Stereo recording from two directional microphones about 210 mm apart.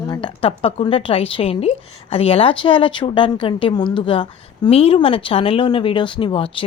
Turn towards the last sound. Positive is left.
turn(degrees=25)  # may be behind; listen again after turning